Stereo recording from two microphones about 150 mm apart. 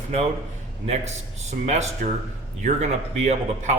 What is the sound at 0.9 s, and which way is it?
Speech, 50° right (ahead or behind).